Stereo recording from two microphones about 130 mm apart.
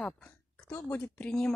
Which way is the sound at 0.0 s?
10° left (ahead or behind).